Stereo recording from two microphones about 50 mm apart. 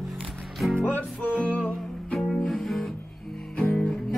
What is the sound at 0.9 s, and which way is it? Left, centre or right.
Music, left.